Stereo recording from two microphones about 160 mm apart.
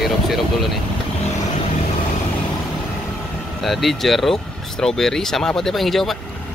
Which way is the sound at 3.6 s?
Centre (ahead or behind).